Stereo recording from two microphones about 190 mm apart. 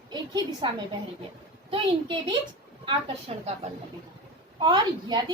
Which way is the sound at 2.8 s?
35° right (ahead or behind).